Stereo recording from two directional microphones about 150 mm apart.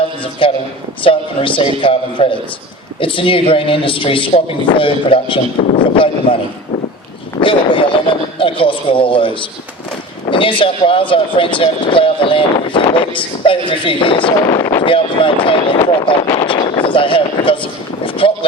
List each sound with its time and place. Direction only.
0.2 s a man's voice: 35° left (ahead or behind)
7.4 s speech: 35° left (ahead or behind)
14.3 s speech: 20° left (ahead or behind)
14.8 s speech: 35° left (ahead or behind)
16.5 s a sound: 30° left (ahead or behind)